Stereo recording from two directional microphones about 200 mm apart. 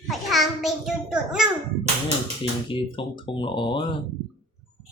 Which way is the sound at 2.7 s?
25° left (ahead or behind).